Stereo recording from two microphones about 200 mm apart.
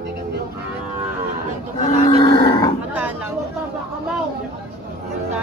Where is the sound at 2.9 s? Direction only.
10° right (ahead or behind).